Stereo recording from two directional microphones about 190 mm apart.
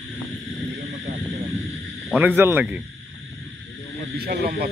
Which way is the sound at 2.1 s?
10° right (ahead or behind).